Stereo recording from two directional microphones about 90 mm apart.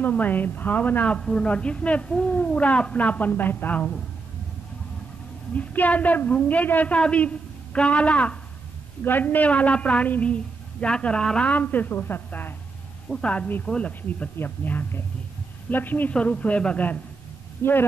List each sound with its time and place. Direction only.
0.0 s a woman's voice: 20° left (ahead or behind)
5.5 s a woman's voice: 15° left (ahead or behind)